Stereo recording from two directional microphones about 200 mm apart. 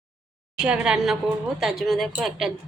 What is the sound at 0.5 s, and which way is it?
A woman's voice, 5° right (ahead or behind).